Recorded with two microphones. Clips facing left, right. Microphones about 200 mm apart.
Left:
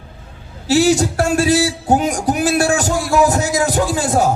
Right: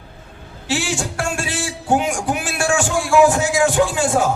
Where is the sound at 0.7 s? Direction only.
40° left (ahead or behind).